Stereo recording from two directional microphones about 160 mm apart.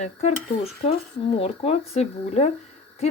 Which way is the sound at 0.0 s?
40° left (ahead or behind).